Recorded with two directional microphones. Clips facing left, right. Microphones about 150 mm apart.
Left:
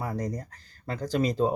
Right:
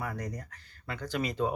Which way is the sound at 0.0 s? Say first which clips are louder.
Left 5 dB; 30° left (ahead or behind).